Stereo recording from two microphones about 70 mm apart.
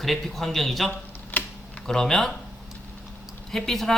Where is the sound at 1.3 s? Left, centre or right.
Left.